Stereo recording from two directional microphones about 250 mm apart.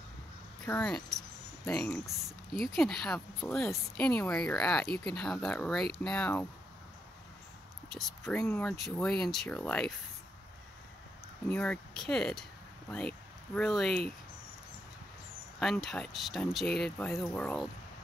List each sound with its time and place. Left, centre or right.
0.7 s speech: centre
7.9 s speech: centre
11.4 s speech: centre
13.6 s speech: centre
15.6 s speech: centre